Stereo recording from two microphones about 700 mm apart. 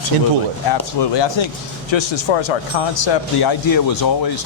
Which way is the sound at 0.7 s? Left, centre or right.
Left.